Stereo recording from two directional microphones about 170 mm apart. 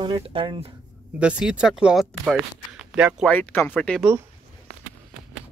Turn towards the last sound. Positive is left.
turn(degrees=10)  # may be behind; listen again after turning